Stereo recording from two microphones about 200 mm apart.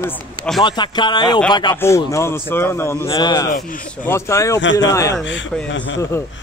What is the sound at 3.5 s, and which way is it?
Speech, 45° left (ahead or behind).